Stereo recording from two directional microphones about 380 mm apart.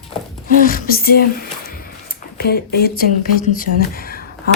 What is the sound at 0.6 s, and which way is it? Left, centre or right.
Speech, left.